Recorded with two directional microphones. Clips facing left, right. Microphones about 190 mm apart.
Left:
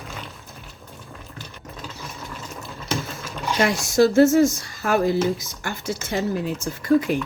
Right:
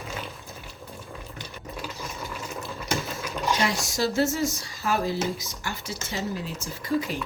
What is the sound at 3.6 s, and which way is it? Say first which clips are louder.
Speech: left 13 dB; 55° left (ahead or behind).